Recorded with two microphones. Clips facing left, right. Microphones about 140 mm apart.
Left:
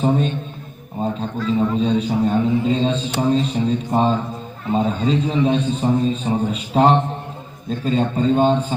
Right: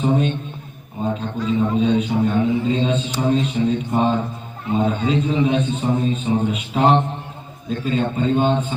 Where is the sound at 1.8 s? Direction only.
35° left (ahead or behind).